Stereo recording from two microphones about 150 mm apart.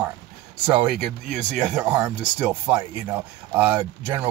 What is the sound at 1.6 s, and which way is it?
Speech, 5° right (ahead or behind).